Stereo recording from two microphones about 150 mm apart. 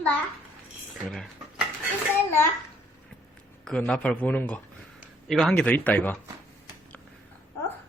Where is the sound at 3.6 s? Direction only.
5° left (ahead or behind).